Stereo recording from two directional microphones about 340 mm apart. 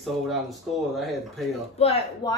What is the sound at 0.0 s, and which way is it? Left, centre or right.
Speech, centre.